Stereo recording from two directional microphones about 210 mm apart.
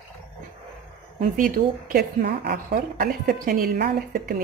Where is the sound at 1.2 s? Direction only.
40° right (ahead or behind).